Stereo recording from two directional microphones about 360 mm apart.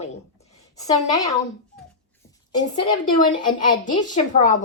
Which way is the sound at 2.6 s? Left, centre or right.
Centre.